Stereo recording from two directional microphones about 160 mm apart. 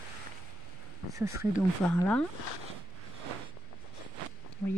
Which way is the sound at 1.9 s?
5° left (ahead or behind).